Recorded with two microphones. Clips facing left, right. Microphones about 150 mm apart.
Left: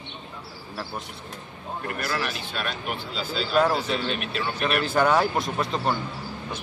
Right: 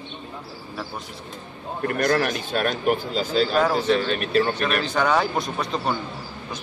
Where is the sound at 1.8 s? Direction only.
45° right (ahead or behind).